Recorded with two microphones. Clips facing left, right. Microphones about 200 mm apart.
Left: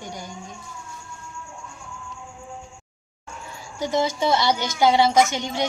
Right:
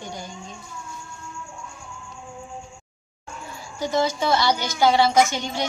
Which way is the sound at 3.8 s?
20° left (ahead or behind).